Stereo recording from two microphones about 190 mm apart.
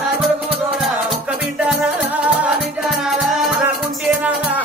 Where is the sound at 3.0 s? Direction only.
Centre (ahead or behind).